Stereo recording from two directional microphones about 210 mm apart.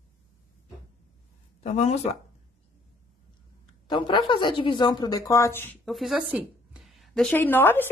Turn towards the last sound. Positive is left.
turn(degrees=10)  # may be behind; listen again after turning